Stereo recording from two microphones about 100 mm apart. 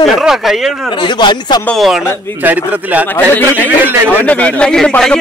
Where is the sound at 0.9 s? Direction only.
55° left (ahead or behind).